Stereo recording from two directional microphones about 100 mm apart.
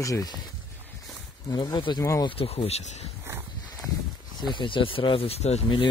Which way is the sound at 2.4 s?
80° left.